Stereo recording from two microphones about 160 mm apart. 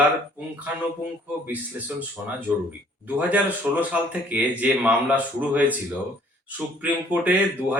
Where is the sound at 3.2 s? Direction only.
10° right (ahead or behind).